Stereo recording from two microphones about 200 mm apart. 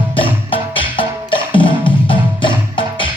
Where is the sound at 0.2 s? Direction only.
25° left (ahead or behind).